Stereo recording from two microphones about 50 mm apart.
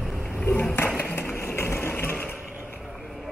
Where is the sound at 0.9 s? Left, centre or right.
Left.